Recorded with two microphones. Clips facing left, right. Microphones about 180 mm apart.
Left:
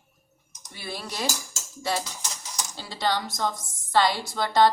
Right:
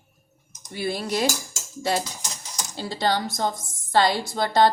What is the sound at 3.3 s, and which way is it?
Speech, 30° right (ahead or behind).